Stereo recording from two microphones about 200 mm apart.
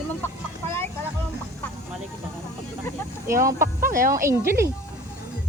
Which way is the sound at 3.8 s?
45° right (ahead or behind).